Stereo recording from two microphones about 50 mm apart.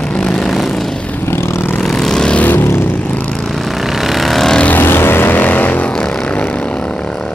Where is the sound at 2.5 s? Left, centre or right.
Left.